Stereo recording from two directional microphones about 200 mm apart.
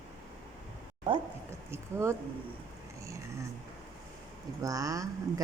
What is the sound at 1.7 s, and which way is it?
Speech, 15° right (ahead or behind).